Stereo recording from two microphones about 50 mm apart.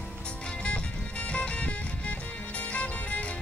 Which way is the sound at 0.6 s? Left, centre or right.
Left.